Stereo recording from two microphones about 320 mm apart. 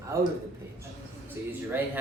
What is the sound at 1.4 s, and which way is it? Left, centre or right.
Speech, centre.